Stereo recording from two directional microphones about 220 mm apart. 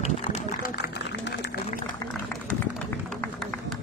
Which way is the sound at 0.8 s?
50° left (ahead or behind).